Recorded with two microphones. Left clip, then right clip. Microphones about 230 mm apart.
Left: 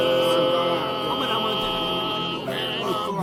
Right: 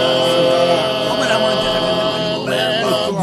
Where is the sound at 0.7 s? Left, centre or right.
Right.